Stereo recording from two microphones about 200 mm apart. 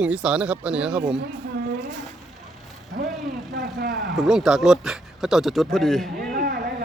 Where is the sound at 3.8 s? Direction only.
55° right (ahead or behind).